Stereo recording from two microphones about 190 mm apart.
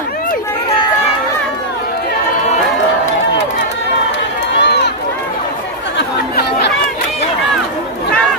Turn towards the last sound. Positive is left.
turn(degrees=60)  # may be behind; listen again after turning